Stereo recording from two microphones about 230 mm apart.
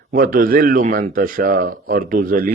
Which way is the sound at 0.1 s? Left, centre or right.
Right.